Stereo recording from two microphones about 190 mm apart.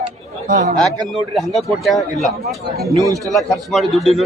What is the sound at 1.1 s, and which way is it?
A man's voice, centre (ahead or behind).